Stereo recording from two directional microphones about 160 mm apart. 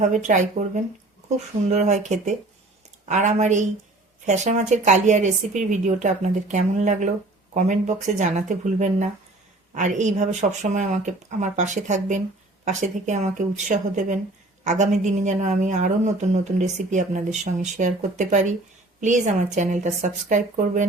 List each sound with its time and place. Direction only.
0.0 s a woman's voice: 50° right (ahead or behind)